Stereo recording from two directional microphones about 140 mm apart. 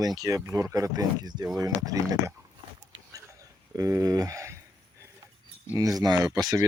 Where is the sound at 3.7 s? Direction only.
25° right (ahead or behind).